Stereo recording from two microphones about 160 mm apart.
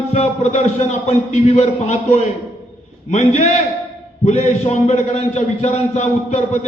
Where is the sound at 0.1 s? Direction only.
45° left (ahead or behind).